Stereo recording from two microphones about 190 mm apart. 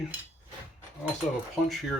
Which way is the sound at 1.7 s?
Centre (ahead or behind).